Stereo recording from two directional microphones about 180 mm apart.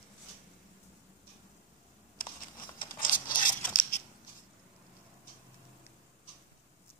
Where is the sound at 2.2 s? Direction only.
50° left (ahead or behind).